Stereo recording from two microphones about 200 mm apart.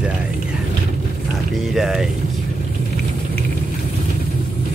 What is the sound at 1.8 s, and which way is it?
Speech, centre (ahead or behind).